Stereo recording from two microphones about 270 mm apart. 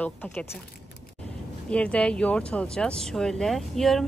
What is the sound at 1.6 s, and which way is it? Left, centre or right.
A woman's voice, centre.